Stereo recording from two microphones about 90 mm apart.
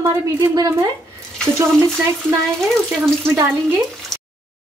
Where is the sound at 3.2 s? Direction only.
25° right (ahead or behind).